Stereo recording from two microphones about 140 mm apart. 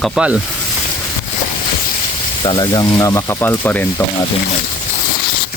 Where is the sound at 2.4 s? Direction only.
30° left (ahead or behind); by 4.0 s 15° left (ahead or behind).